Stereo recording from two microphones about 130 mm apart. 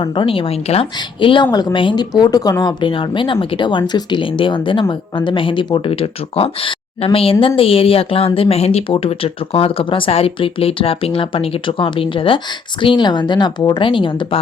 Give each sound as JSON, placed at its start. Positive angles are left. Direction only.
{"t": 0.0, "sound": "a woman's voice", "side_deg": 40}
{"t": 0.9, "sound": "a woman's voice", "side_deg": 40}